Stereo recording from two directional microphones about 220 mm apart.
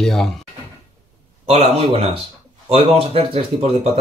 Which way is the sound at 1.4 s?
30° right (ahead or behind).